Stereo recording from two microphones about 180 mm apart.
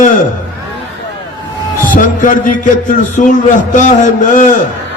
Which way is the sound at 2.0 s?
50° left (ahead or behind).